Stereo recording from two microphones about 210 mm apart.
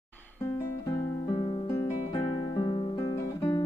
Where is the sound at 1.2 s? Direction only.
25° left (ahead or behind).